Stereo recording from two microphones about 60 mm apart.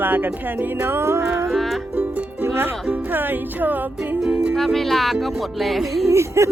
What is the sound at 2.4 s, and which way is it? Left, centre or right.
Music, right.